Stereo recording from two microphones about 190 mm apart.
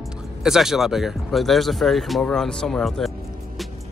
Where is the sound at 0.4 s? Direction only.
Centre (ahead or behind).